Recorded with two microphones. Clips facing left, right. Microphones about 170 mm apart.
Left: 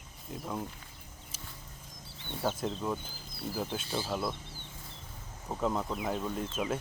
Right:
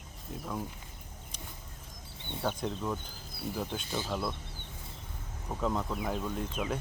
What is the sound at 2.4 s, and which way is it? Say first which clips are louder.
Speech: left 1 dB; 5° left (ahead or behind).